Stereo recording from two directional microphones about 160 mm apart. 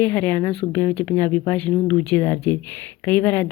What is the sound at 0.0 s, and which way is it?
Speech, 10° left (ahead or behind).